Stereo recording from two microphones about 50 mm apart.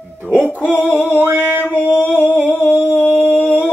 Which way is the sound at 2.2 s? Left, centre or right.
Right.